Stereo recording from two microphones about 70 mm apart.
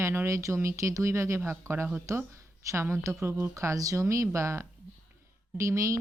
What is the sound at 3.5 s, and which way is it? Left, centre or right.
A woman's voice, right.